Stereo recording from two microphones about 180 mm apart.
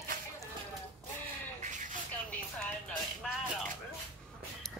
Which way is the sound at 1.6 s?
45° right (ahead or behind).